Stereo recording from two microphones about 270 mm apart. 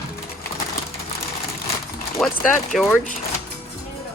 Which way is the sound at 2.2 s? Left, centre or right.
Centre.